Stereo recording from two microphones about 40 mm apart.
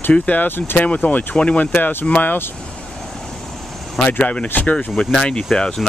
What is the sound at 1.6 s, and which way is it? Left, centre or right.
Speech, left.